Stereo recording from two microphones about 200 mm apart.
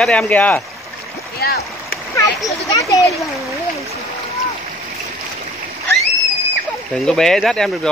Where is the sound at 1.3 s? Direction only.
50° left (ahead or behind).